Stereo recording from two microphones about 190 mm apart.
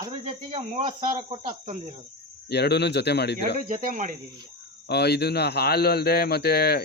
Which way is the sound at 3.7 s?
45° right (ahead or behind).